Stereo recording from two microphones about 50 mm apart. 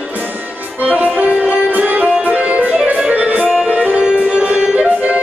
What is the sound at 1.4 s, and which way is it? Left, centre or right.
Music, right.